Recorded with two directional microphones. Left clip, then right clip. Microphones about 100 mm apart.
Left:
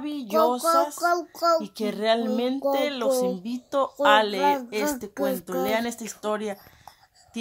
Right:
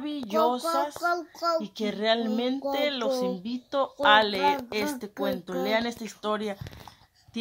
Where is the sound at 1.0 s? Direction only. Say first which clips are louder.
Left 5 dB; 60° left (ahead or behind).